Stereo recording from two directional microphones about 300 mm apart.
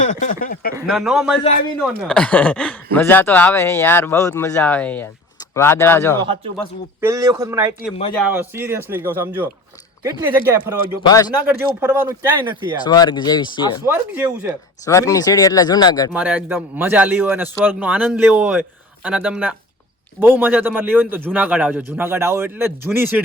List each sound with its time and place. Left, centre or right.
0.0 s speech: left
0.8 s speech: centre
7.0 s speech: centre
11.0 s speech: centre
11.4 s speech: centre
12.8 s speech: centre
13.8 s speech: centre
14.8 s speech: centre
16.1 s speech: centre